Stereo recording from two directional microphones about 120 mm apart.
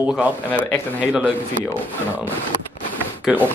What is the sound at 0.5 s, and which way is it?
Speech, 15° left (ahead or behind).